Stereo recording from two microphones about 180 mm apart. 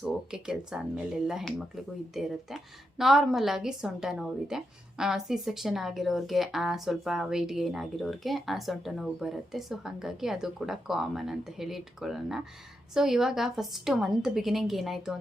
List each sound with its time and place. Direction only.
0.0 s a woman's voice: 5° right (ahead or behind)